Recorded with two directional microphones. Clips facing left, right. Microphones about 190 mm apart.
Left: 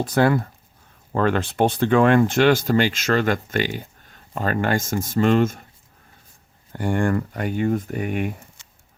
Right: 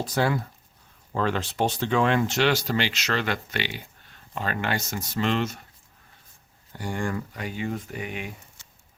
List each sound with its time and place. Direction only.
0.0 s speech: 55° left (ahead or behind)
6.7 s speech: 55° left (ahead or behind)